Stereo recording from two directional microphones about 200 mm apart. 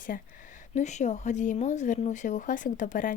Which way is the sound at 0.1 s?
45° left (ahead or behind).